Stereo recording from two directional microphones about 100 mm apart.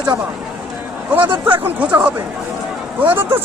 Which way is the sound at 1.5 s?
15° right (ahead or behind).